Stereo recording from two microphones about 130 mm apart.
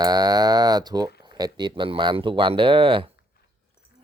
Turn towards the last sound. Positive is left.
turn(degrees=-40)  # may be behind; listen again after turning